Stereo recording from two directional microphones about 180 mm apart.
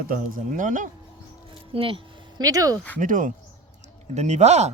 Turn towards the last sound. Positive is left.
turn(degrees=-40)  # may be behind; listen again after turning